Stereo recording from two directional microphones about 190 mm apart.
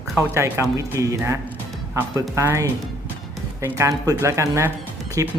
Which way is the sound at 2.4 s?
15° right (ahead or behind).